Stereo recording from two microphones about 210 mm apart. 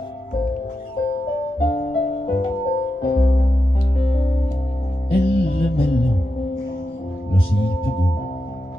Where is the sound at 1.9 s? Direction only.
35° left (ahead or behind).